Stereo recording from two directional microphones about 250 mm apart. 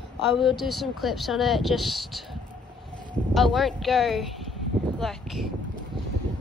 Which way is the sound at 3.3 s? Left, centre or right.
Centre.